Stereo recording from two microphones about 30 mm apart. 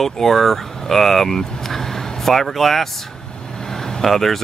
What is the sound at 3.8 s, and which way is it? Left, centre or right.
Vehicle, centre.